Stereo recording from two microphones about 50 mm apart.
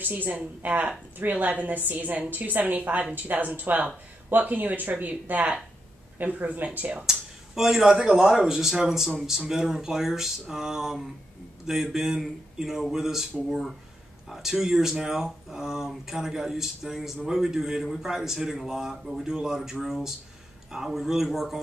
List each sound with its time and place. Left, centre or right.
0.0 s a woman's voice: right
7.5 s a man's voice: centre